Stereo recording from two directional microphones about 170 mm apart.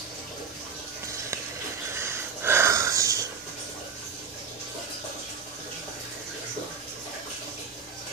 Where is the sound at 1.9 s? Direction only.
15° right (ahead or behind).